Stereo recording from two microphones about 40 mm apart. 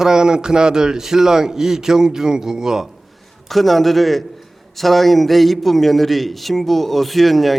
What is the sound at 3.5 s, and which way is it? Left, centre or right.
A man's voice, centre.